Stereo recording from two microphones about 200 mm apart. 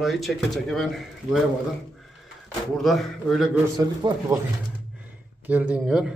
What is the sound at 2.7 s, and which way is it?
Speech, centre (ahead or behind).